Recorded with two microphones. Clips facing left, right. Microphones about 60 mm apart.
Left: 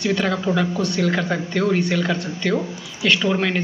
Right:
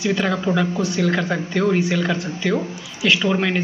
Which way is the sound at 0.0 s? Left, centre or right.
Centre.